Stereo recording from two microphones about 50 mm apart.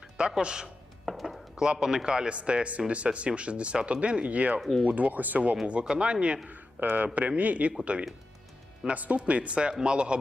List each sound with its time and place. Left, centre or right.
0.2 s speech: centre
1.0 s a sound: centre
1.5 s a man's voice: centre; by 5.5 s right
5.8 s speech: centre
6.5 s a man's voice: right; by 10.2 s centre